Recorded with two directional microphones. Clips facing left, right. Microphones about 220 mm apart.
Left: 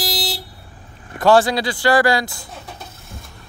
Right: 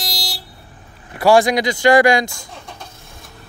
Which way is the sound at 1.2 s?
10° right (ahead or behind).